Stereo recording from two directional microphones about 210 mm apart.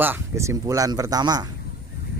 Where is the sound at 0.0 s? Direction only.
10° right (ahead or behind).